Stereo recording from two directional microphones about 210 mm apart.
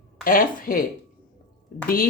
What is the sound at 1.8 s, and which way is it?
Speech, 45° left (ahead or behind).